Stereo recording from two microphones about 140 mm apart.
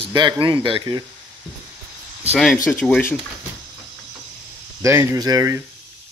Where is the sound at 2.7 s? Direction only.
10° left (ahead or behind).